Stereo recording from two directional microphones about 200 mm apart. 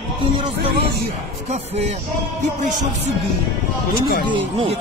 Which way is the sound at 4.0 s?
50° left (ahead or behind).